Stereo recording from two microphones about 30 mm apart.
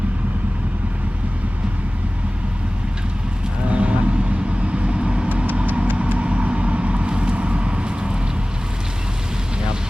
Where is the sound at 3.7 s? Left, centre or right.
Right.